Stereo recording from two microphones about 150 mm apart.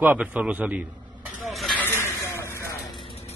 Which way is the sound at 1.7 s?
15° left (ahead or behind).